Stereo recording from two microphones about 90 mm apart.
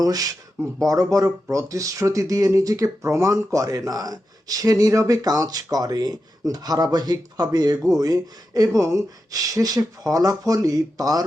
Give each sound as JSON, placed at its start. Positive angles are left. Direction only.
{"t": 0.0, "sound": "speech", "side_deg": -45}